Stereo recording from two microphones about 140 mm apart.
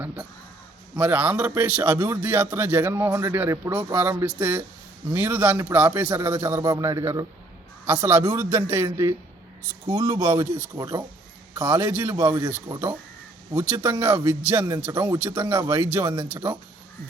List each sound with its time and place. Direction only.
0.9 s a man's voice: 10° right (ahead or behind)
12.6 s a man's voice: 25° right (ahead or behind)